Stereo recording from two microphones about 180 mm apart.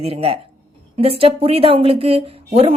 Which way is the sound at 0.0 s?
30° right (ahead or behind).